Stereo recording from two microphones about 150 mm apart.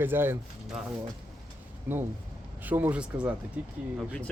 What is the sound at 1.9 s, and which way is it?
Speech, 15° right (ahead or behind).